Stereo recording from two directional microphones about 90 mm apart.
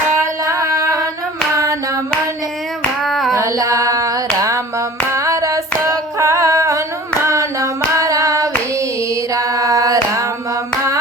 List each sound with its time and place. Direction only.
0.2 s singing: 35° right (ahead or behind)
3.0 s hands: 5° left (ahead or behind)
3.3 s child singing: 35° right (ahead or behind)
5.1 s female singing: 35° right (ahead or behind)
7.3 s hands: 35° right (ahead or behind)
9.3 s a sound: 40° right (ahead or behind)